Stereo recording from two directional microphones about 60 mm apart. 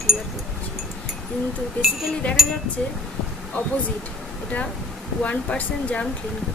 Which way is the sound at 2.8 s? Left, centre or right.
Centre.